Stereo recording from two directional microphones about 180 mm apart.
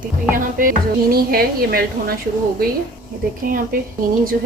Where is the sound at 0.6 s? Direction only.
50° right (ahead or behind).